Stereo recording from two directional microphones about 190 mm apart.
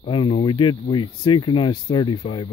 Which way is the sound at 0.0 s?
25° left (ahead or behind).